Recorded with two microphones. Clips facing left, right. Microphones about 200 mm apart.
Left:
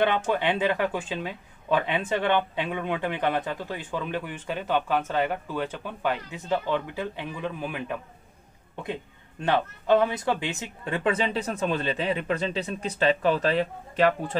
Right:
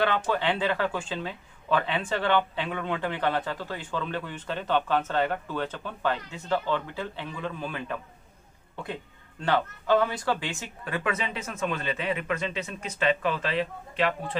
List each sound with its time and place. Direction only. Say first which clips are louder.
0.0 s speech: left 2 dB; 15° left (ahead or behind)
9.4 s speech: left 1 dB; 20° left (ahead or behind); by 14.3 s 45° left (ahead or behind)